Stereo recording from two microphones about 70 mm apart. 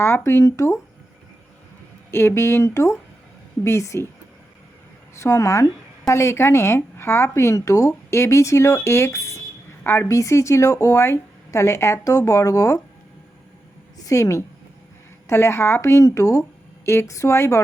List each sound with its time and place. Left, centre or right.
0.3 s a woman's voice: left
2.0 s a woman's voice: left
5.2 s speech: left
12.0 s speech: left
14.0 s a woman's voice: left